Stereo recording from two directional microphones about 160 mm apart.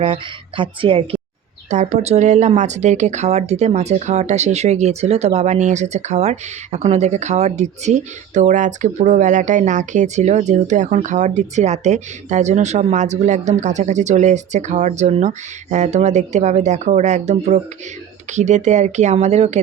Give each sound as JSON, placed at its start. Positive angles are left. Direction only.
{"t": 0.0, "sound": "speech", "side_deg": -30}
{"t": 1.7, "sound": "speech", "side_deg": -45}